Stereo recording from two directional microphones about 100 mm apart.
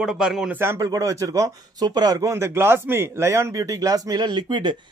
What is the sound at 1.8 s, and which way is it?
Speech, 45° right (ahead or behind).